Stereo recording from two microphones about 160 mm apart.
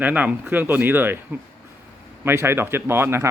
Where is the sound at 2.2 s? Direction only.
15° right (ahead or behind).